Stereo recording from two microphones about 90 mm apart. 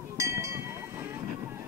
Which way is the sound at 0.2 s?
35° right (ahead or behind).